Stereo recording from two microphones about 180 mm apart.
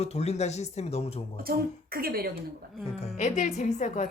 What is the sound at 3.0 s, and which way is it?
Speech, 40° left (ahead or behind).